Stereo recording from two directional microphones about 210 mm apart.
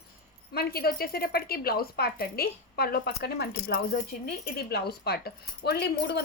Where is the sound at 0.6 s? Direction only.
45° left (ahead or behind).